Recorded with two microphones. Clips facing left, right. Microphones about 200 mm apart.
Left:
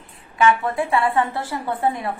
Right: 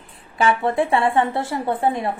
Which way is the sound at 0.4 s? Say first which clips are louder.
Even; 30° right (ahead or behind).